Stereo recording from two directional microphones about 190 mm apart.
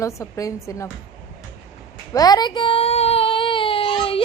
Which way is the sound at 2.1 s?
20° left (ahead or behind).